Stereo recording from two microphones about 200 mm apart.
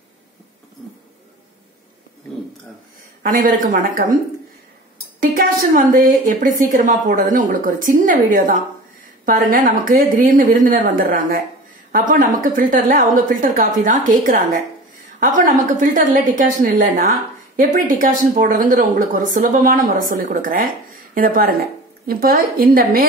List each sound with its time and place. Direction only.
3.2 s a woman's voice: 45° right (ahead or behind)
5.2 s a woman's voice: 45° right (ahead or behind)